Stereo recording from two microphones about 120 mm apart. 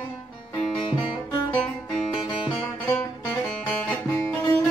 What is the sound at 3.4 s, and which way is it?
Music, 10° left (ahead or behind).